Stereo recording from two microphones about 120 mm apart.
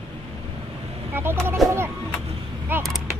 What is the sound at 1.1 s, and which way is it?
Speech, 20° right (ahead or behind).